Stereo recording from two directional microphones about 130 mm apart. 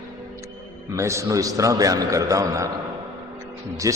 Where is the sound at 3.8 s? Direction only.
25° right (ahead or behind).